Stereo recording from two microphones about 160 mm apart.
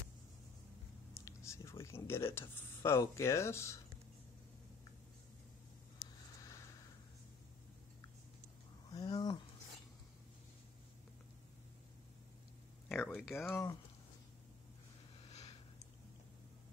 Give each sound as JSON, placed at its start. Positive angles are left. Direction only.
{"t": 1.1, "sound": "speech", "side_deg": 15}
{"t": 5.9, "sound": "a sound", "side_deg": 20}
{"t": 8.9, "sound": "speech", "side_deg": 25}
{"t": 12.8, "sound": "speech", "side_deg": 5}
{"t": 13.5, "sound": "speech", "side_deg": 20}